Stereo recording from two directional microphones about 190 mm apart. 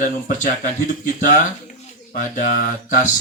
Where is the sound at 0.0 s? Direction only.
40° left (ahead or behind).